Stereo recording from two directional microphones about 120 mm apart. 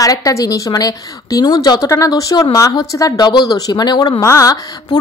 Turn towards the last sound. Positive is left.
turn(degrees=30)  # may be behind; listen again after turning